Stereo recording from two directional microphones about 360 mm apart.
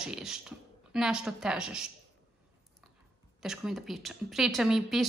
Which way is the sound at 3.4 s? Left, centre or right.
Centre.